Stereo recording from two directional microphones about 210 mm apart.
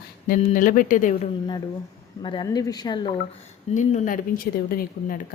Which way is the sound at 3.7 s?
40° left (ahead or behind).